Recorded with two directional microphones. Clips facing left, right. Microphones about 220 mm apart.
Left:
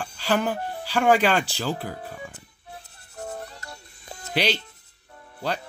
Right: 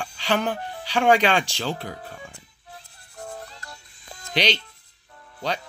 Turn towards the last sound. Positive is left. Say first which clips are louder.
# even
turn(degrees=5)  # may be behind; listen again after turning